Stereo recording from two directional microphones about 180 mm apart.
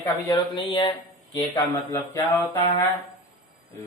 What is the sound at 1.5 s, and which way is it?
Speech, 15° left (ahead or behind).